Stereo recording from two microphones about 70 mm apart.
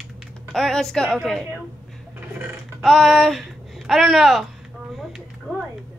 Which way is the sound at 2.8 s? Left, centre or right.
Centre.